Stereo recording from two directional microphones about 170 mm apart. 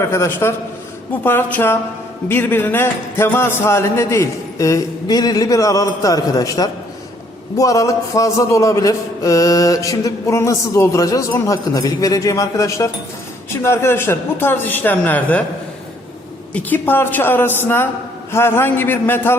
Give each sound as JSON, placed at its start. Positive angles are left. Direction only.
{"t": 0.0, "sound": "a man's voice", "side_deg": 15}
{"t": 16.6, "sound": "a man's voice", "side_deg": 10}